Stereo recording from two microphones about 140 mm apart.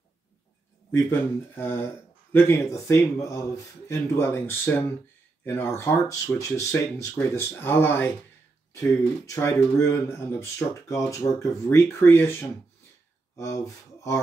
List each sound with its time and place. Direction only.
1.0 s speech: 15° left (ahead or behind)